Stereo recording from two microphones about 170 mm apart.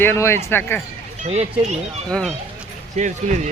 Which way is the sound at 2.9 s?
45° right (ahead or behind).